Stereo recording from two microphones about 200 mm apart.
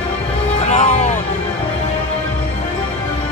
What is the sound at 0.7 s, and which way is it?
Music, 35° left (ahead or behind).